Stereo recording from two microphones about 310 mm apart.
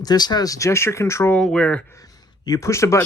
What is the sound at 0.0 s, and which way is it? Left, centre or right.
Speech, centre.